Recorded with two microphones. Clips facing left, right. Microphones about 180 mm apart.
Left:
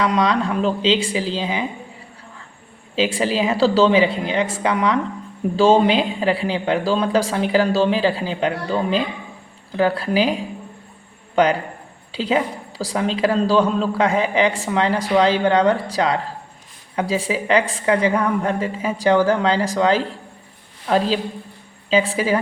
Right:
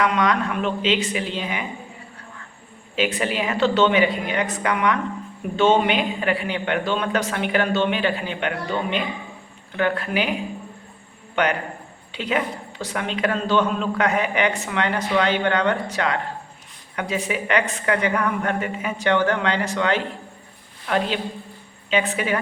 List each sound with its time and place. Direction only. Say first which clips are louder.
0.0 s a man's voice: left 2 dB; 30° left (ahead or behind)
3.2 s a woman's voice: left 5 dB; 30° left (ahead or behind)
12.1 s a man's voice: left 4 dB; 30° left (ahead or behind)
21.8 s a man's voice: left 4 dB; 30° left (ahead or behind)